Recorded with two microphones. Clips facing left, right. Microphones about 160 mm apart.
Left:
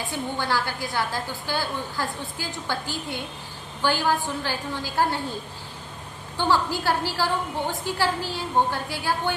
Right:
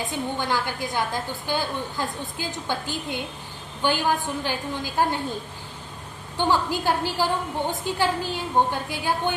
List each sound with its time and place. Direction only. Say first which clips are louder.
0.0 s a woman's voice: right 1 dB; 20° right (ahead or behind)
6.3 s a woman's voice: even; 15° right (ahead or behind)